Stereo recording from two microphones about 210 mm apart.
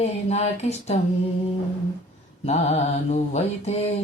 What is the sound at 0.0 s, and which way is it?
Speech, 30° left (ahead or behind).